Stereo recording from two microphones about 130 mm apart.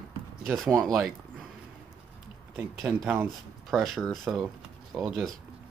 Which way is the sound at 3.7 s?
Centre (ahead or behind).